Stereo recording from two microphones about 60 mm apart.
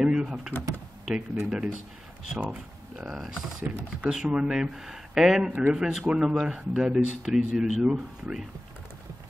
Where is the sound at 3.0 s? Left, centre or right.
Centre.